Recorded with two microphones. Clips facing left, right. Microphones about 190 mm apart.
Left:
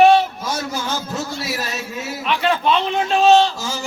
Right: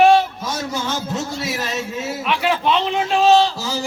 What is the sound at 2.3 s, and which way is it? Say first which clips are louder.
Speech: left 1 dB; 10° right (ahead or behind).